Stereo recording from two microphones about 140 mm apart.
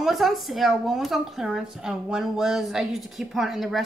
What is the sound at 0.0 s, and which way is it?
Speech, centre (ahead or behind).